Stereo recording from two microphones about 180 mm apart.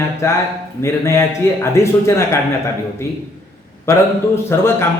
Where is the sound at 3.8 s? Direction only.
15° left (ahead or behind).